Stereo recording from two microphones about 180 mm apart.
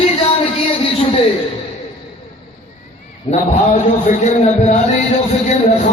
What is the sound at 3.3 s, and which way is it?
A man's voice, 40° left (ahead or behind).